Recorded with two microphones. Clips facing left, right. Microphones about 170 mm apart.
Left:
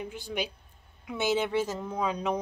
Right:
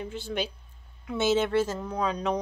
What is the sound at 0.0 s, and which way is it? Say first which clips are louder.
Speech: right 2 dB; 10° left (ahead or behind).